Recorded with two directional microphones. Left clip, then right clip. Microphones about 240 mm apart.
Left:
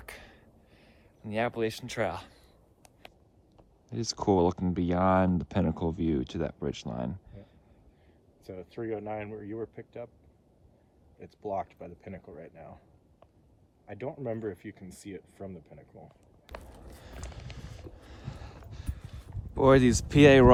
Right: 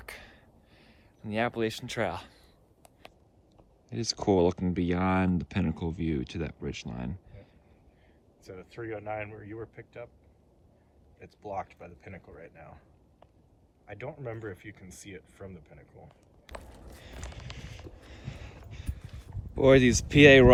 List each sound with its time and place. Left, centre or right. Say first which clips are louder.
0.0 s a sound: right 1 dB; centre
3.8 s speech: even; centre
8.4 s speech: left 3 dB; left
11.2 s speech: left 3 dB; left
13.8 s speech: left 3 dB; left
16.7 s vehicle: even; centre
17.6 s a sound: right 1 dB; centre
18.7 s clip-clop: even; centre
19.5 s speech: right 1 dB; centre